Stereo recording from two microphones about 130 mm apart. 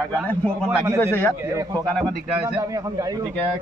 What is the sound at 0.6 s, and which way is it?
Speech, 20° right (ahead or behind).